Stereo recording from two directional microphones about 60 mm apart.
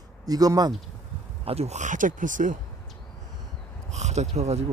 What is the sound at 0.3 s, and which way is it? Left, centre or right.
Speech, right.